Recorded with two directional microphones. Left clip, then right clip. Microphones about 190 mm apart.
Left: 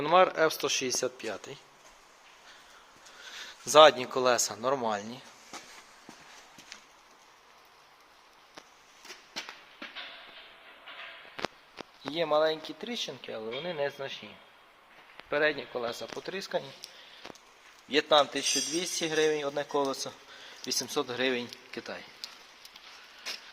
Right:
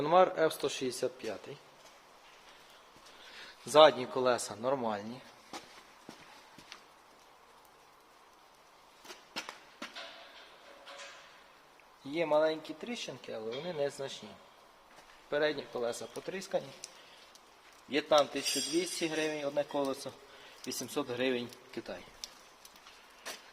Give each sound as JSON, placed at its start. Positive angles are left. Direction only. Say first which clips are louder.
{"t": 0.0, "sound": "speech", "louder": "left 3 dB", "side_deg": 10}
{"t": 3.3, "sound": "speech", "louder": "left 4 dB", "side_deg": 15}
{"t": 12.1, "sound": "speech", "louder": "left 2 dB", "side_deg": 20}
{"t": 15.3, "sound": "speech", "louder": "left 4 dB", "side_deg": 15}
{"t": 17.8, "sound": "speech", "louder": "left 4 dB", "side_deg": 20}